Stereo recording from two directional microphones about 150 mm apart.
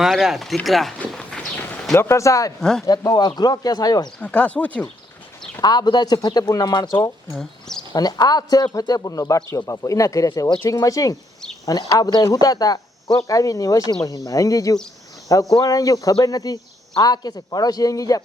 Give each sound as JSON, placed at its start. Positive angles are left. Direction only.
{"t": 0.0, "sound": "speech", "side_deg": -5}
{"t": 2.6, "sound": "speech", "side_deg": 5}
{"t": 2.8, "sound": "speech", "side_deg": 25}
{"t": 4.2, "sound": "speech", "side_deg": 10}
{"t": 5.6, "sound": "speech", "side_deg": 30}
{"t": 7.3, "sound": "speech", "side_deg": 5}
{"t": 7.9, "sound": "speech", "side_deg": 25}